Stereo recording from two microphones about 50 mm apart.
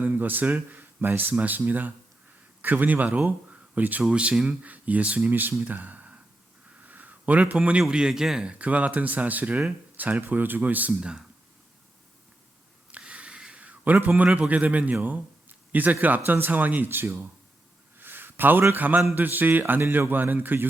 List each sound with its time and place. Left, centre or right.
0.0 s speech: right
4.0 s speech: right
5.3 s speech: right
5.6 s speech: right
6.8 s a sound: right
7.5 s a man's voice: right
8.4 s speech: right
13.1 s a sound: right
14.3 s a man's voice: right
18.0 s a sound: right
18.7 s speech: right